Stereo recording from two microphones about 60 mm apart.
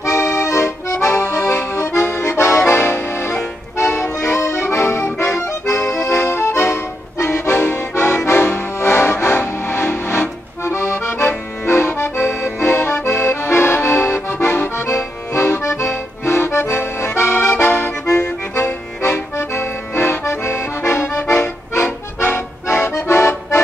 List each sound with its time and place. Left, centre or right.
0.0 s accordion: left